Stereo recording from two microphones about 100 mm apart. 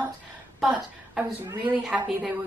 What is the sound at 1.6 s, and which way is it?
Speech, 15° right (ahead or behind).